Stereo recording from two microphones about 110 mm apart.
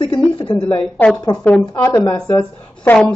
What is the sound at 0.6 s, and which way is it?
Speech, 15° left (ahead or behind).